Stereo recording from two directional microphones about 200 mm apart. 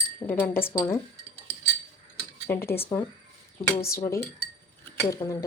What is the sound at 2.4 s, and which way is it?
Speech, 10° left (ahead or behind).